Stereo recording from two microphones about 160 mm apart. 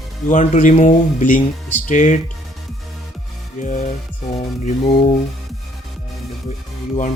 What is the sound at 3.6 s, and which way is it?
Speech, 50° left (ahead or behind).